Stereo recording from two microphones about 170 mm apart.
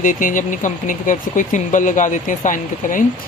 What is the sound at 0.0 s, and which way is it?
Speech, 50° left (ahead or behind).